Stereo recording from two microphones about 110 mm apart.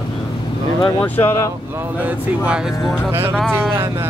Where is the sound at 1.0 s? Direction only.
20° left (ahead or behind).